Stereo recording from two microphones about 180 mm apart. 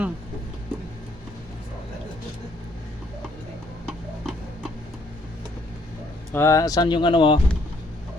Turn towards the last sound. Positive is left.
turn(degrees=25)  # may be behind; listen again after turning